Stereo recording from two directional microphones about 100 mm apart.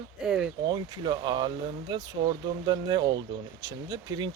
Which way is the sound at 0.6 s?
50° right (ahead or behind).